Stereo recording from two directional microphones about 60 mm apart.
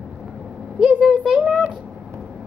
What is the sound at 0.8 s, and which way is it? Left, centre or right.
Speech, centre.